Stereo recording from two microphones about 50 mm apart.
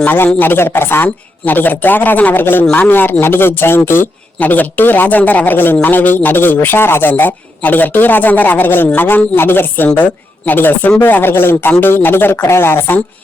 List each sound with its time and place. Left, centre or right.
0.3 s speech: left
4.4 s a man's voice: left